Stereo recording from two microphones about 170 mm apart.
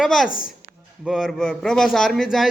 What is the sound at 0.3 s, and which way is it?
Speech, 55° left (ahead or behind).